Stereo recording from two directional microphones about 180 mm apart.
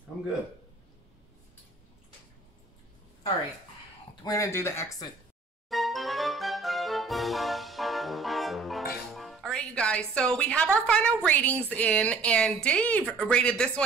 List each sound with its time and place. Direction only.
4.2 s speech: 20° left (ahead or behind)
5.7 s music: centre (ahead or behind)
9.1 s speech: centre (ahead or behind)